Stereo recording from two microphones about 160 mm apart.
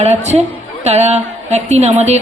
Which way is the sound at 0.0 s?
45° right (ahead or behind).